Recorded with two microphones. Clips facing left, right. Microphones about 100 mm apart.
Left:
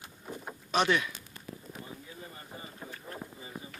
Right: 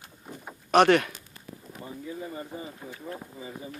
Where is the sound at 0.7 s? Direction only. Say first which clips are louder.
Right 8 dB; 65° right (ahead or behind).